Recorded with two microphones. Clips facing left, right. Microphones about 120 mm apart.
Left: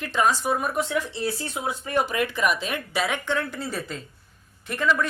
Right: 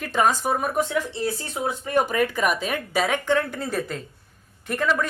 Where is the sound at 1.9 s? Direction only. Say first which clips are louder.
Right 3 dB; 50° right (ahead or behind).